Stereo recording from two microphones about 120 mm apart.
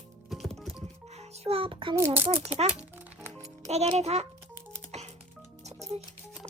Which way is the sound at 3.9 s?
65° right (ahead or behind).